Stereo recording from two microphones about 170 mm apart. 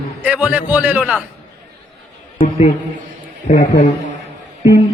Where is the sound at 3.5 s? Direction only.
65° left (ahead or behind).